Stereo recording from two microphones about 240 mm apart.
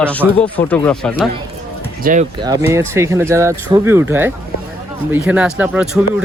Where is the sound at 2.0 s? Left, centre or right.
Right.